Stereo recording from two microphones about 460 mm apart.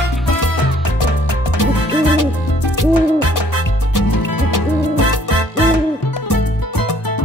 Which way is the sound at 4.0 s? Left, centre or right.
Left.